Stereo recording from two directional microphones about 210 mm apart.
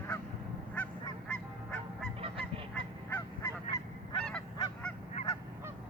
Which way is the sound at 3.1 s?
15° left (ahead or behind).